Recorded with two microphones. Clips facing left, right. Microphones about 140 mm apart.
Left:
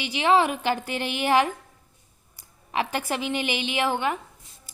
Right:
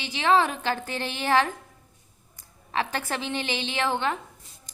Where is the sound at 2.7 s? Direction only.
15° left (ahead or behind).